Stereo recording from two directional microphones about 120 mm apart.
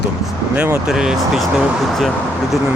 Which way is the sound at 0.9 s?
5° right (ahead or behind).